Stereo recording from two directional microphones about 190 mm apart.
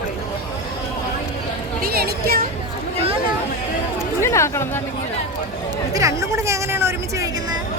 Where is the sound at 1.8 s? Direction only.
55° right (ahead or behind).